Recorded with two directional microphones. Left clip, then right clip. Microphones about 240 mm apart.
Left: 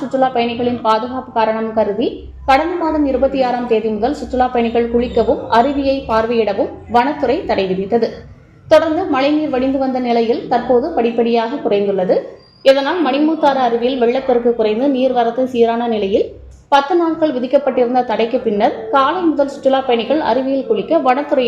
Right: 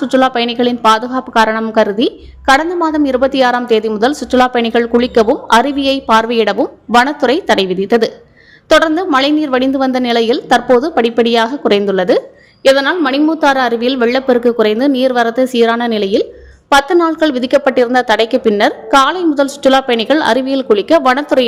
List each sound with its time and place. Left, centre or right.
0.1 s a woman's voice: right